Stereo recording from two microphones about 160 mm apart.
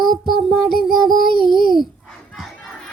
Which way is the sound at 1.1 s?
65° left (ahead or behind).